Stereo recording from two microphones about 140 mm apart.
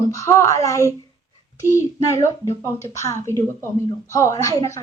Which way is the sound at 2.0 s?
20° left (ahead or behind).